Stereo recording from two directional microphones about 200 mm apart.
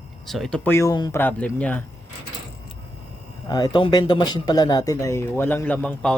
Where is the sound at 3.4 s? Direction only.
20° left (ahead or behind).